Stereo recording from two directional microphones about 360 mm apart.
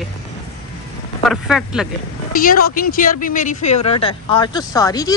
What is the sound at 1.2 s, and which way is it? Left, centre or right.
Speech, centre.